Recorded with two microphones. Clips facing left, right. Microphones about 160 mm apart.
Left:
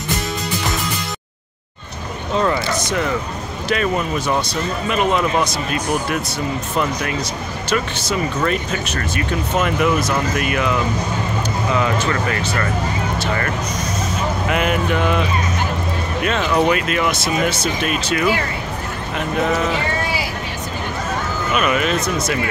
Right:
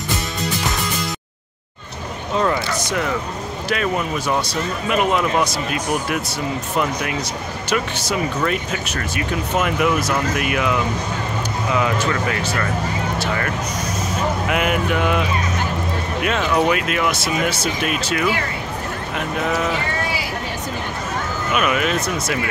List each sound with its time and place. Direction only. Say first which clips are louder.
3.6 s speech: left 2 dB; 5° right (ahead or behind)
8.4 s speech: left 2 dB; 10° right (ahead or behind)
14.5 s speech: left 2 dB; 5° right (ahead or behind)
21.5 s speech: left 1 dB; 5° right (ahead or behind)